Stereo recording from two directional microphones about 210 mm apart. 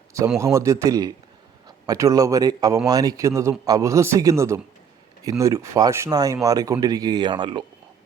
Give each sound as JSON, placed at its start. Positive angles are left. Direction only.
{"t": 0.3, "sound": "speech", "side_deg": -15}